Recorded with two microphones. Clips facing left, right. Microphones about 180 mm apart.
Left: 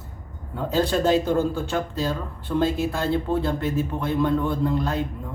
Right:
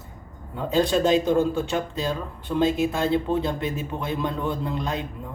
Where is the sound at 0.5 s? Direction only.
15° right (ahead or behind).